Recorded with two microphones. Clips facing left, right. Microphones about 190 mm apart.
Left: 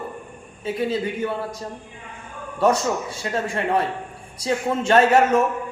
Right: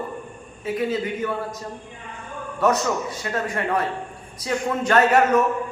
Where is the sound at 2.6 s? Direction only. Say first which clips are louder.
Left 1 dB; 30° left (ahead or behind).